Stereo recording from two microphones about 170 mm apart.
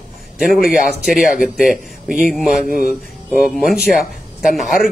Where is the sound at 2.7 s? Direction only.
60° left (ahead or behind).